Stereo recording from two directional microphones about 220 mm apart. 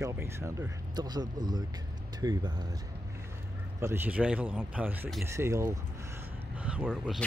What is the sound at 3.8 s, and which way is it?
Speech, 10° right (ahead or behind).